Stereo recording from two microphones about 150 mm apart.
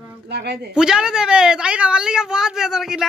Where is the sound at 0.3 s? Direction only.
90° right.